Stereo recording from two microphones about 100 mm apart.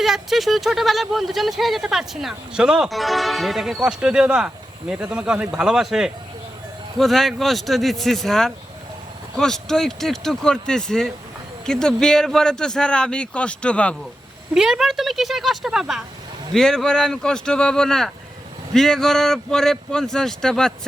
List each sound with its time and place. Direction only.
0.0 s a man's voice: 5° right (ahead or behind)
14.5 s speech: 5° right (ahead or behind)
16.6 s a man's voice: 5° left (ahead or behind)